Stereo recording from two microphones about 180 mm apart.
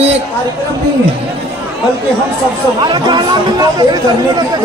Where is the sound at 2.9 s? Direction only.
25° right (ahead or behind).